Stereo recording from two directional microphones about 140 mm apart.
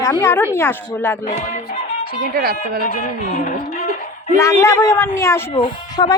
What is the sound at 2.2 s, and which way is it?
Speech, 90° right.